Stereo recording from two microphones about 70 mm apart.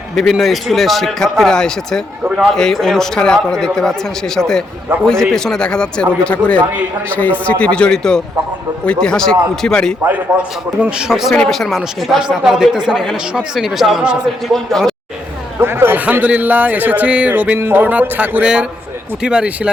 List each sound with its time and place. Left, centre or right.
0.2 s a man's voice: centre
10.1 s a man's voice: centre
11.1 s a man's voice: centre
12.9 s a man's voice: centre
14.0 s a man's voice: centre
14.4 s a man's voice: centre
15.6 s a sound: right
16.2 s speech: right
19.2 s a man's voice: centre